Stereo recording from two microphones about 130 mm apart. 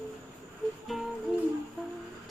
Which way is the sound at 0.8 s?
Centre (ahead or behind).